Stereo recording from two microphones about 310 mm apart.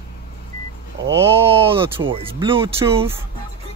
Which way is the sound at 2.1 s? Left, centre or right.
Centre.